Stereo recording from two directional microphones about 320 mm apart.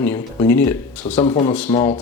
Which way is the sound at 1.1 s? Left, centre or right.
Centre.